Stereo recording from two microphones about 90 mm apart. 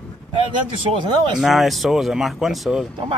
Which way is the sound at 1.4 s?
Centre (ahead or behind).